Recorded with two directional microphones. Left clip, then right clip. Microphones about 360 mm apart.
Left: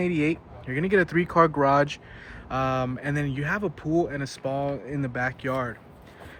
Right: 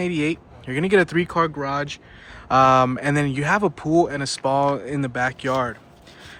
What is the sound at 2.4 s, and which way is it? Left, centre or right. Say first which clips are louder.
Speech: right 12 dB; centre.